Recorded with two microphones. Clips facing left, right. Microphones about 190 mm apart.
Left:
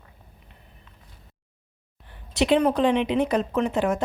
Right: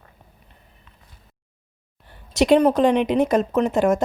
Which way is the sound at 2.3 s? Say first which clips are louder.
Right 4 dB; 40° right (ahead or behind).